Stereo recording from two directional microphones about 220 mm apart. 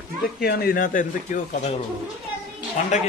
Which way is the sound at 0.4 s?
45° left (ahead or behind).